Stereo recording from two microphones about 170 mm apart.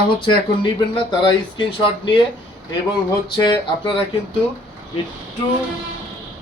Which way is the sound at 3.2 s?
25° left (ahead or behind).